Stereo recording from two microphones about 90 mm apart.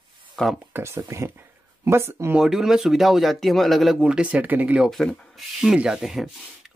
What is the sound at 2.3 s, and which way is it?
Speech, 5° right (ahead or behind).